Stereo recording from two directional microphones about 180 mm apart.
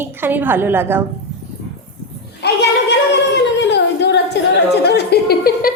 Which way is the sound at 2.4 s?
75° left (ahead or behind).